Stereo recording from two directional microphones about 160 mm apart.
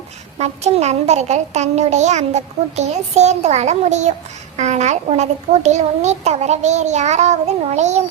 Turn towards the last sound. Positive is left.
turn(degrees=-45)  # may be behind; listen again after turning